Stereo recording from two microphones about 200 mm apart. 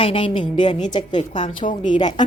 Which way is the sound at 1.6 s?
40° left (ahead or behind).